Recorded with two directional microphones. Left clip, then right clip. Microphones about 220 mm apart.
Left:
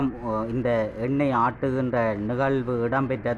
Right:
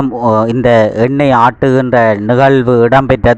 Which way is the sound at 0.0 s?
40° right (ahead or behind).